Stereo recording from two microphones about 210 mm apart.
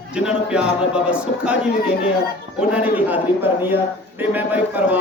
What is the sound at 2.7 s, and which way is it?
A man's voice, 5° right (ahead or behind).